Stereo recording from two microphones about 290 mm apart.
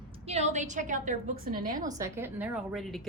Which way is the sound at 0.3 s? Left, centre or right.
Right.